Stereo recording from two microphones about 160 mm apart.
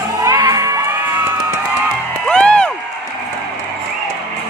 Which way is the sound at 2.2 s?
5° left (ahead or behind).